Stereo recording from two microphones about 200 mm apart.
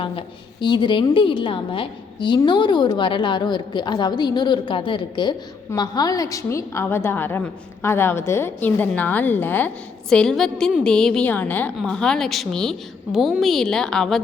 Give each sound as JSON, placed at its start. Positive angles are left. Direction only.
{"t": 0.0, "sound": "a woman's voice", "side_deg": 25}